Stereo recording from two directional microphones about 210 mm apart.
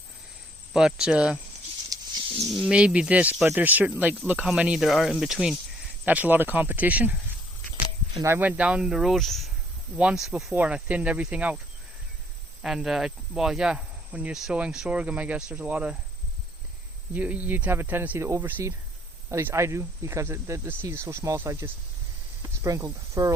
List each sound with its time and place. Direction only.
0.7 s speech: centre (ahead or behind)
1.9 s a sound: 15° right (ahead or behind)
2.5 s speech: centre (ahead or behind)
8.2 s speech: 10° right (ahead or behind)
12.6 s speech: centre (ahead or behind)
17.2 s speech: 5° right (ahead or behind)